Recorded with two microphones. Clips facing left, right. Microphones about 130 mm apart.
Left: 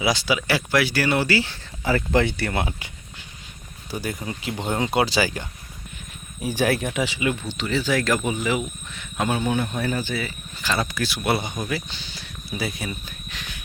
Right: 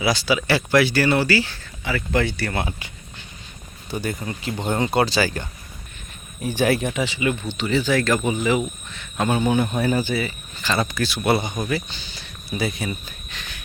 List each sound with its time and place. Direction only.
0.0 s speech: 20° left (ahead or behind)
1.8 s speech: 40° left (ahead or behind)
2.1 s speech: 25° left (ahead or behind)
3.9 s speech: 5° left (ahead or behind)
10.6 s speech: 5° left (ahead or behind)